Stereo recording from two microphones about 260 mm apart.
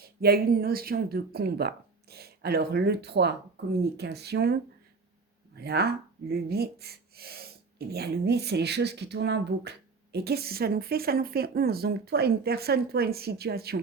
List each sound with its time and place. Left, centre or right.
0.0 s speech: right
5.5 s speech: right